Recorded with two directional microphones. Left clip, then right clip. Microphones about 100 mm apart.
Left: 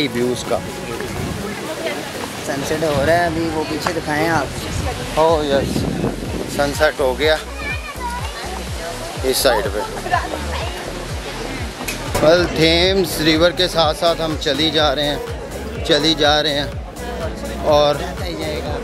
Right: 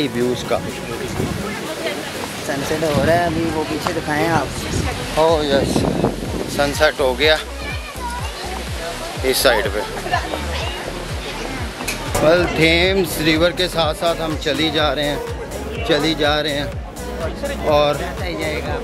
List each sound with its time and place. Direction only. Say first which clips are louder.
2.4 s speech: even; 15° left (ahead or behind)
5.1 s speech: even; 15° right (ahead or behind)
6.5 s speech: even; 10° left (ahead or behind)
9.2 s speech: right 1 dB; 15° left (ahead or behind)
12.3 s speech: left 1 dB; 15° left (ahead or behind)
17.6 s speech: left 2 dB; 15° left (ahead or behind)